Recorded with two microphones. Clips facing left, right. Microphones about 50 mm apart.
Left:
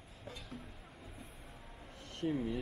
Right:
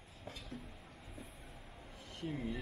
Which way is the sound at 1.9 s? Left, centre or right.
Left.